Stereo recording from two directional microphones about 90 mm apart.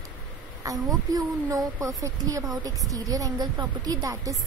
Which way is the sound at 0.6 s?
40° right (ahead or behind).